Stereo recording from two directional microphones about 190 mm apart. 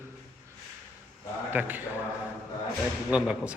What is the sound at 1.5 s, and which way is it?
Speech, 10° right (ahead or behind).